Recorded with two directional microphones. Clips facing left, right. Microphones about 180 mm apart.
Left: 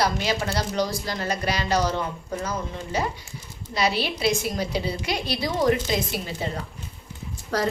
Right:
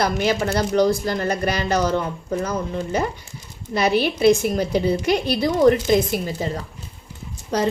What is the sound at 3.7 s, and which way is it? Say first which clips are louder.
Speech: right 6 dB; 50° right (ahead or behind).